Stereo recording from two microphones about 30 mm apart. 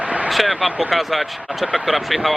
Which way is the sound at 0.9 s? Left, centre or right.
Centre.